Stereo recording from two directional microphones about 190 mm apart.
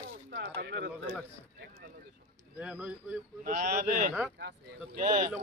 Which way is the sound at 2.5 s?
10° right (ahead or behind).